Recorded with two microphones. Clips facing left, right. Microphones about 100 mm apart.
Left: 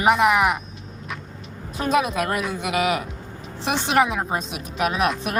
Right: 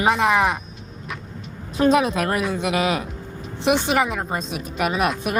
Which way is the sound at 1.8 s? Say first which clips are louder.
Right 4 dB; 30° right (ahead or behind).